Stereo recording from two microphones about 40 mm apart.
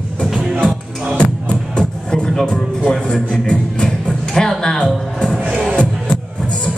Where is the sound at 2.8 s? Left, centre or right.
Centre.